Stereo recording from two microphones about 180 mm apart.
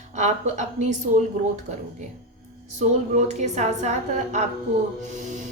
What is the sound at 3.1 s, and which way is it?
A woman's voice, 40° right (ahead or behind).